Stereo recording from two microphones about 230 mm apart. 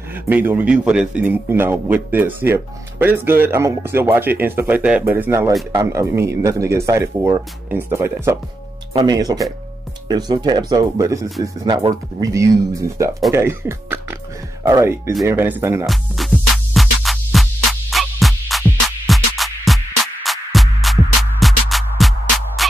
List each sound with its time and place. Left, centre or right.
0.3 s a man's voice: centre
15.9 s music: centre